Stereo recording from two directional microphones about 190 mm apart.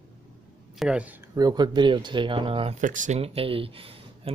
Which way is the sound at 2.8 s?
40° right (ahead or behind).